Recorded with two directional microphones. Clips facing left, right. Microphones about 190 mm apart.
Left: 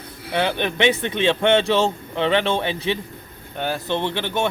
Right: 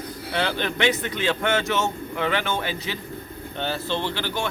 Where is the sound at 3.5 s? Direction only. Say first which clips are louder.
Left 3 dB; 10° left (ahead or behind).